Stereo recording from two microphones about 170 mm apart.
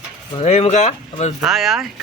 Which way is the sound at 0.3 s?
40° left (ahead or behind).